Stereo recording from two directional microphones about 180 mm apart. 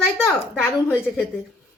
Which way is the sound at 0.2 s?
10° left (ahead or behind).